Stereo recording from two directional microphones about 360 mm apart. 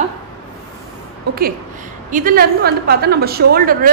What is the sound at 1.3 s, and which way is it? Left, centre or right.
A woman's voice, right.